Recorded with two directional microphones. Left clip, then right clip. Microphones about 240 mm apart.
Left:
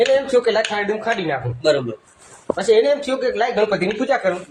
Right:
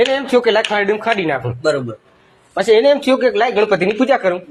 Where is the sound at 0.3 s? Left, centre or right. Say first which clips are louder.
Right 3 dB; right.